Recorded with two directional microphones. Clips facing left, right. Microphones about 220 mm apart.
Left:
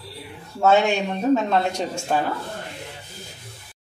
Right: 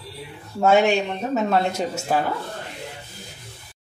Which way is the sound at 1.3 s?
5° right (ahead or behind).